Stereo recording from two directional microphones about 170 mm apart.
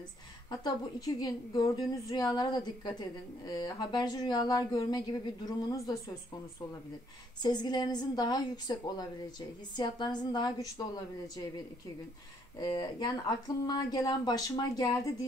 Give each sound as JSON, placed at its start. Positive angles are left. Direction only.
{"t": 0.5, "sound": "a woman's voice", "side_deg": 20}
{"t": 7.4, "sound": "a woman's voice", "side_deg": 25}
{"t": 12.5, "sound": "a woman's voice", "side_deg": 25}